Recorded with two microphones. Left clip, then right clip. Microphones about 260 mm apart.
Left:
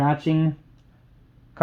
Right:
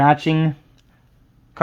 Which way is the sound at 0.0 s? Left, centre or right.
Right.